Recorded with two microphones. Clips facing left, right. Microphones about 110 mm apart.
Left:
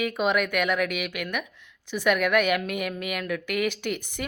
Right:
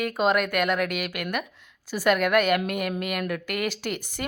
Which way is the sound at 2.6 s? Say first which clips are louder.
Right 2 dB; centre (ahead or behind).